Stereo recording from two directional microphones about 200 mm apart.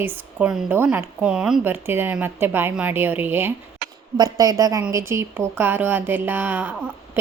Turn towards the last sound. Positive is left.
turn(degrees=-10)  # may be behind; listen again after turning